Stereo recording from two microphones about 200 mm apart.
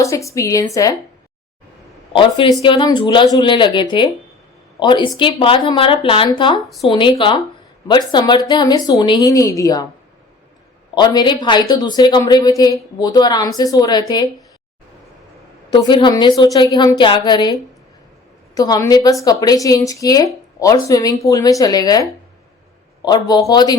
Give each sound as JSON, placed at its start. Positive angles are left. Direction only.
{"t": 0.0, "sound": "speech", "side_deg": 15}
{"t": 2.1, "sound": "a woman's voice", "side_deg": 25}
{"t": 10.9, "sound": "a woman's voice", "side_deg": 20}
{"t": 15.7, "sound": "a woman's voice", "side_deg": 20}